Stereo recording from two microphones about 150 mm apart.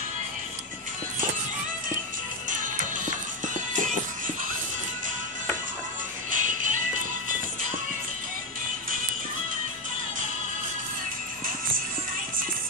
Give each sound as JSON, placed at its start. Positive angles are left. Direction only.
{"t": 3.7, "sound": "music", "side_deg": -60}
{"t": 6.3, "sound": "music", "side_deg": -60}